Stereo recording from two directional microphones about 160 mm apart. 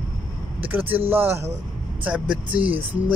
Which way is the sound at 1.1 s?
15° right (ahead or behind).